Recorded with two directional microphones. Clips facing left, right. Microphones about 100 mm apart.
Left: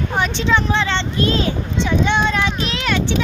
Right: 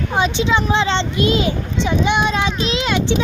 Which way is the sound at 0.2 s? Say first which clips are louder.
Right 2 dB; 15° right (ahead or behind).